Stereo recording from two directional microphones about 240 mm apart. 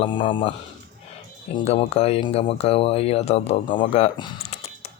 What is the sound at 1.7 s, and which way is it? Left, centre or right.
Speech, left.